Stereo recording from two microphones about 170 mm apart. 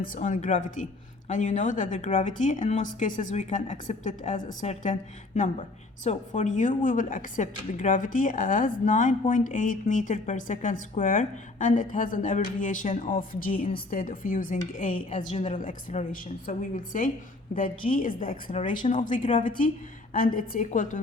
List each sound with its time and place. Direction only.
0.0 s speech: 50° left (ahead or behind)
19.2 s a woman's voice: 30° left (ahead or behind)
20.1 s speech: 55° left (ahead or behind)